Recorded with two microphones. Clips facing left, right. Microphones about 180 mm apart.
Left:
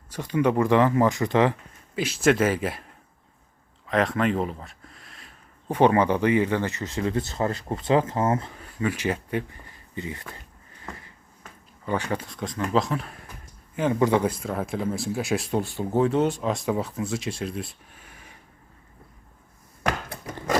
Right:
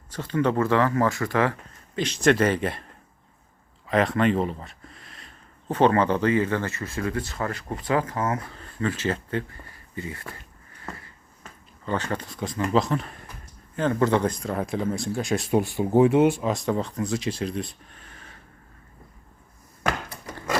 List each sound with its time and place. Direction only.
0.1 s speech: 15° left (ahead or behind)
2.0 s speech: 5° left (ahead or behind)
3.8 s speech: centre (ahead or behind)
5.6 s speech: 15° left (ahead or behind)
8.5 s speech: 10° left (ahead or behind)
11.9 s speech: 10° left (ahead or behind)
12.2 s speech: centre (ahead or behind)
13.7 s speech: 10° left (ahead or behind)
15.5 s speech: 15° right (ahead or behind)
16.4 s speech: centre (ahead or behind)